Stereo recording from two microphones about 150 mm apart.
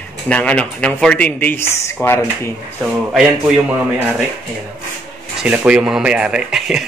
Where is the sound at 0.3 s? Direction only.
10° left (ahead or behind).